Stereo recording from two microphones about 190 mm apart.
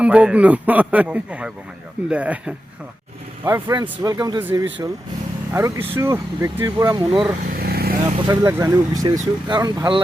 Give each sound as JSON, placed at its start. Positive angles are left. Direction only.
{"t": 0.0, "sound": "speech", "side_deg": -5}
{"t": 3.4, "sound": "speech", "side_deg": -15}
{"t": 7.5, "sound": "vehicle", "side_deg": -55}
{"t": 8.3, "sound": "speech", "side_deg": -15}